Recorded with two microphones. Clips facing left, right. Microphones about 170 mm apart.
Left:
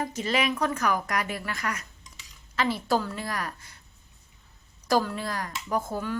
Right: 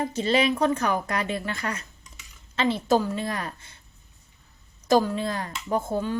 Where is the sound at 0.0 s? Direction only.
30° right (ahead or behind).